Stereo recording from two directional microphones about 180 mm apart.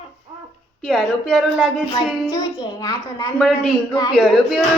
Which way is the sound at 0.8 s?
Centre (ahead or behind).